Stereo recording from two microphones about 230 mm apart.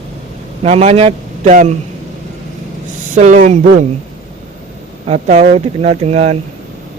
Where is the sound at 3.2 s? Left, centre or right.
Right.